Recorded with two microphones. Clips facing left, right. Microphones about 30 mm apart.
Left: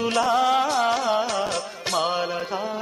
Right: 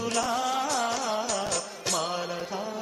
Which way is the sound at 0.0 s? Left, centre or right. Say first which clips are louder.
Left 7 dB; left.